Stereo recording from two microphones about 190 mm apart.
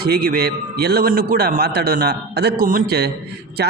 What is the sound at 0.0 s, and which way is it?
A man's voice, 55° right (ahead or behind).